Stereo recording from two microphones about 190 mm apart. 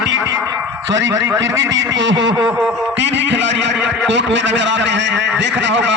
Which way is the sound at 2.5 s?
5° right (ahead or behind).